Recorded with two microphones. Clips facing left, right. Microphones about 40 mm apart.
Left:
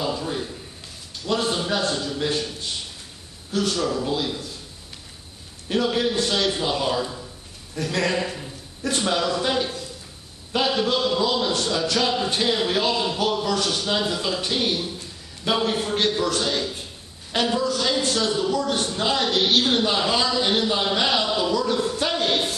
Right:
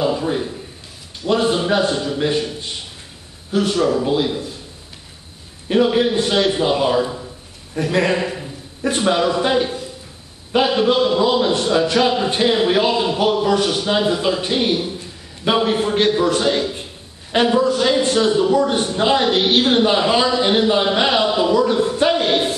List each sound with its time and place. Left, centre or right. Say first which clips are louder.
0.0 s a man's voice: right 7 dB; right
5.7 s a man's voice: right 7 dB; right